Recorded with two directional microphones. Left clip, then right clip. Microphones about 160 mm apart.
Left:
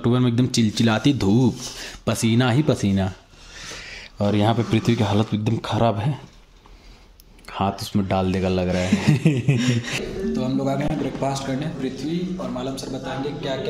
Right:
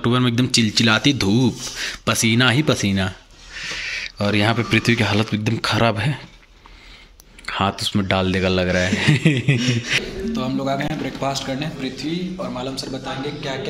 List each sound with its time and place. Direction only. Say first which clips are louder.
0.0 s speech: right 2 dB; 10° left (ahead or behind)
7.4 s a man's voice: right 4 dB; centre (ahead or behind); by 12.1 s 15° right (ahead or behind)
12.4 s a man's voice: right 2 dB; 25° right (ahead or behind)